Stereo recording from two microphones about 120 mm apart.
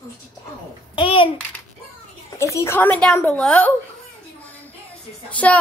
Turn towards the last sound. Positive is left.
turn(degrees=10)  # may be behind; listen again after turning